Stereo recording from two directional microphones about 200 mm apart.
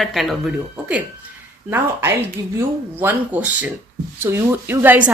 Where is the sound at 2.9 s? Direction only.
10° right (ahead or behind).